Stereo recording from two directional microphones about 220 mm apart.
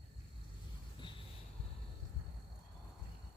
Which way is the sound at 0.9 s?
20° left (ahead or behind).